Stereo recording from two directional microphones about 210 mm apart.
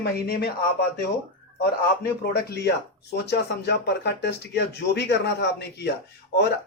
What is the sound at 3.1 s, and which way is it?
Speech, 50° left (ahead or behind).